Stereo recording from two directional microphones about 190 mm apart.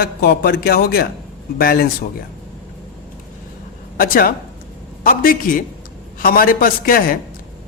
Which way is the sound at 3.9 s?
50° left (ahead or behind).